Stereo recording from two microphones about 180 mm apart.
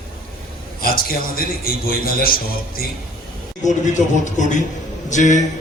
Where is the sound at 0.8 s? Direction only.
55° left (ahead or behind).